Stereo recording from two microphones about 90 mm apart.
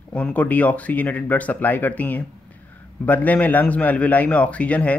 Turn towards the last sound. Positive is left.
turn(degrees=15)  # may be behind; listen again after turning